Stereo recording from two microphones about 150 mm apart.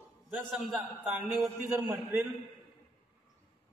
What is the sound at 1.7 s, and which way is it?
Speech, 15° right (ahead or behind).